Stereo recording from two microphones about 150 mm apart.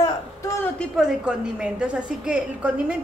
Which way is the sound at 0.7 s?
5° right (ahead or behind).